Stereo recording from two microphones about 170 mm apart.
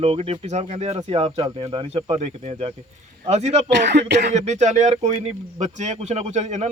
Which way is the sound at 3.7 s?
90° right.